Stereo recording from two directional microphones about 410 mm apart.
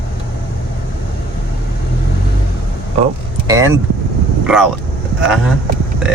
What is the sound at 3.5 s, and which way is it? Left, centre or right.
Speech, centre.